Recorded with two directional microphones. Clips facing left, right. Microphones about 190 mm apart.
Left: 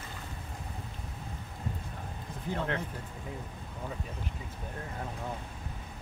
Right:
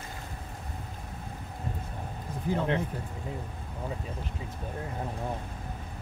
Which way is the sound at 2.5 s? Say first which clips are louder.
Right 5 dB; 20° right (ahead or behind).